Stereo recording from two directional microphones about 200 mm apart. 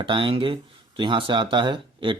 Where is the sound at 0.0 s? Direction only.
25° right (ahead or behind).